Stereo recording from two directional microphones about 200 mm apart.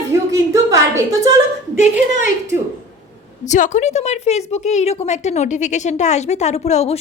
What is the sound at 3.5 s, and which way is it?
A woman's voice, 35° left (ahead or behind).